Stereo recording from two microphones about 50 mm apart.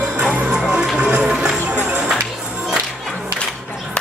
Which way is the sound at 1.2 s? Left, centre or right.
Centre.